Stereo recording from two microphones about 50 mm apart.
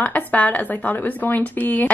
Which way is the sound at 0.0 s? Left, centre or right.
Left.